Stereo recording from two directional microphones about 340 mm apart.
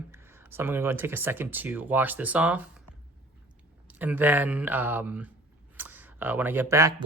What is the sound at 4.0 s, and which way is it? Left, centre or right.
Speech, centre.